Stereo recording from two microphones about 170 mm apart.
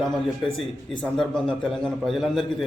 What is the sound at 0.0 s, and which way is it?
A man's voice, centre (ahead or behind).